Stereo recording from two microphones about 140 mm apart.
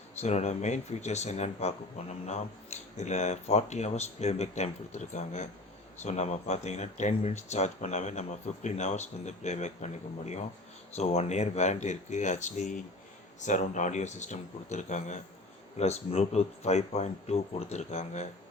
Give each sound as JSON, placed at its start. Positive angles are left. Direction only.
{"t": 0.2, "sound": "speech", "side_deg": 50}